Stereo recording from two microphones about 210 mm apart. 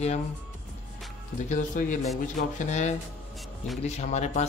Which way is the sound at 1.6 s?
40° left (ahead or behind).